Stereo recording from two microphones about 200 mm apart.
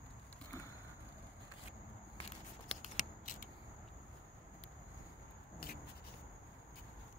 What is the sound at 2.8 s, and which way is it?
Scissors, 40° left (ahead or behind).